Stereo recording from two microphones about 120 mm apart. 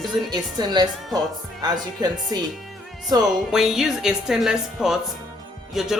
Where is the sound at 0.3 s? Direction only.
35° right (ahead or behind).